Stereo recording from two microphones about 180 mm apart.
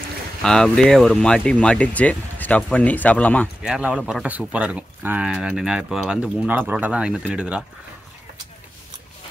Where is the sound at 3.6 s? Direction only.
5° right (ahead or behind).